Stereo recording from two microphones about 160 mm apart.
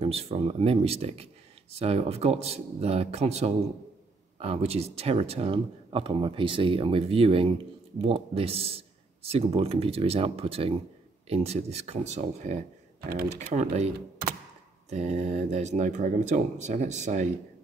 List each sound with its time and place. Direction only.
0.0 s speech: 40° right (ahead or behind)